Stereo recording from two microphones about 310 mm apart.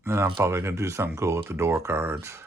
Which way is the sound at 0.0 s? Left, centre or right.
Centre.